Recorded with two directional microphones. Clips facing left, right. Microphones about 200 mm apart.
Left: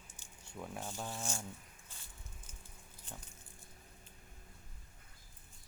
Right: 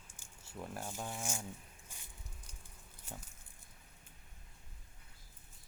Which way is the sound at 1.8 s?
15° right (ahead or behind).